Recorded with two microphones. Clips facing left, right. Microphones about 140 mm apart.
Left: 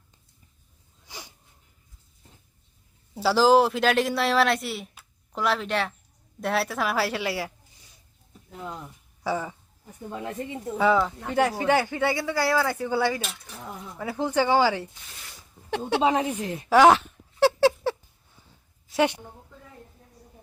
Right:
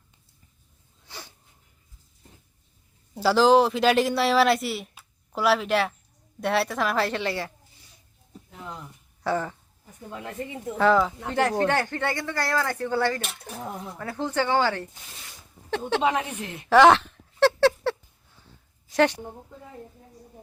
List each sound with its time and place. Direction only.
1.0 s a sound: 15° left (ahead or behind)
3.2 s speech: centre (ahead or behind)
4.9 s a sound: 5° right (ahead or behind)
6.4 s speech: centre (ahead or behind)
9.2 s speech: 10° left (ahead or behind)
10.8 s speech: centre (ahead or behind)
13.2 s speech: 55° right (ahead or behind)
14.0 s speech: 10° left (ahead or behind)
16.0 s a woman's voice: 35° left (ahead or behind)
16.6 s a sound: 5° left (ahead or behind)
18.9 s a woman's voice: 10° left (ahead or behind)